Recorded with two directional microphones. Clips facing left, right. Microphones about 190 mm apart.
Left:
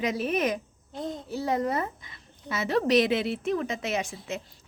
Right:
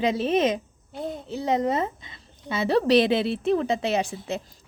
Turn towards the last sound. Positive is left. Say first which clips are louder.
# right 5 dB
turn(degrees=-35)  # may be behind; listen again after turning